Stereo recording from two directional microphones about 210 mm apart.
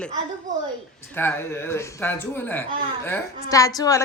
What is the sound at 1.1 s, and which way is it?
Speech, 10° left (ahead or behind).